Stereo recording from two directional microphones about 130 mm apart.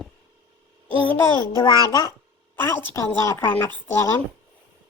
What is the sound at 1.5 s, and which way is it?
Speech, 30° left (ahead or behind).